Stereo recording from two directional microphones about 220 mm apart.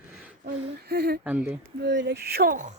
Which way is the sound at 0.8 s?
45° right (ahead or behind).